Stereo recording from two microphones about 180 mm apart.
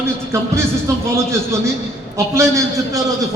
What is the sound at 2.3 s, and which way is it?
Speech, 15° right (ahead or behind).